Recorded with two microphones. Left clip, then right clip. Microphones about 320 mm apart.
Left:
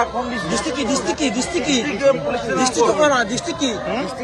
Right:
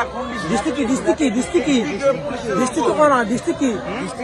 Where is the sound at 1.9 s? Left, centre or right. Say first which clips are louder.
Left 2 dB; left.